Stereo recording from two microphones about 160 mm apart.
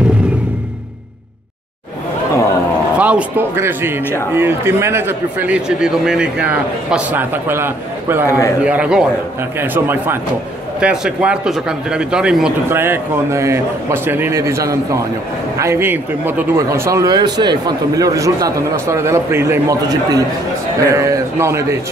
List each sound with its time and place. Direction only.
3.0 s speech: 10° right (ahead or behind)
8.3 s a man's voice: 20° left (ahead or behind)
8.6 s speech: 5° right (ahead or behind)